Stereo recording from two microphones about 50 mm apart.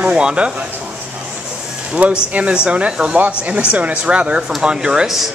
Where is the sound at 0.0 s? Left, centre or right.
Right.